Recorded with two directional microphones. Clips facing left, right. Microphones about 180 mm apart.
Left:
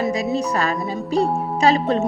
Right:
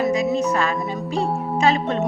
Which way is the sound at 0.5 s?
40° left (ahead or behind).